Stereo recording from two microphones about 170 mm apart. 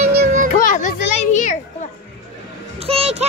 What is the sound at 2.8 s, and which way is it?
Speech, 35° right (ahead or behind).